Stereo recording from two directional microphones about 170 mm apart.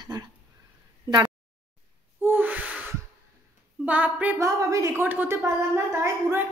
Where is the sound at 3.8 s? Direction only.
10° right (ahead or behind).